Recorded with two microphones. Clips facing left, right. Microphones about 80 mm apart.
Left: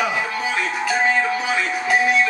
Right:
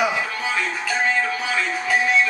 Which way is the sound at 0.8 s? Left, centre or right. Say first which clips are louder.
Left 4 dB; centre.